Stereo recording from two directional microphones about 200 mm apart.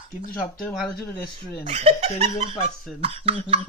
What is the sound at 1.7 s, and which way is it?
Speech, 35° right (ahead or behind).